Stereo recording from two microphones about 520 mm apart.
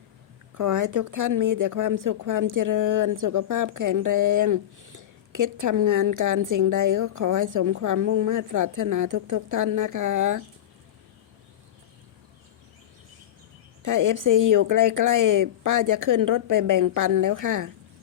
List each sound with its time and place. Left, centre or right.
0.5 s speech: right
13.8 s speech: right